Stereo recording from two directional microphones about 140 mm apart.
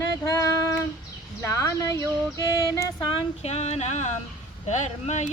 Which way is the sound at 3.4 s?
50° left (ahead or behind).